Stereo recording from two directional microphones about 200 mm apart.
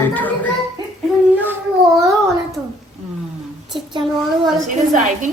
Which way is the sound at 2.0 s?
Centre (ahead or behind).